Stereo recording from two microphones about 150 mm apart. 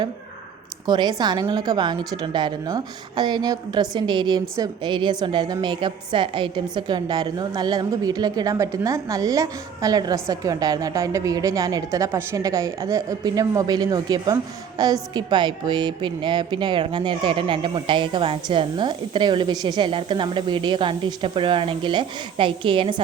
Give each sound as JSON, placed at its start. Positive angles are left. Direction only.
{"t": 0.9, "sound": "a woman's voice", "side_deg": -30}